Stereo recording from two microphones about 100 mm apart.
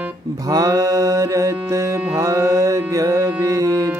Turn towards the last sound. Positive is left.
turn(degrees=-35)  # may be behind; listen again after turning